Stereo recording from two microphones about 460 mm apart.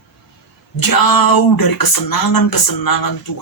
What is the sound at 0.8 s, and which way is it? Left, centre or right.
Speech, left.